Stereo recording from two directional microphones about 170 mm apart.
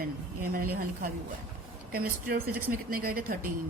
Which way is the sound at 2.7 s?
60° right (ahead or behind).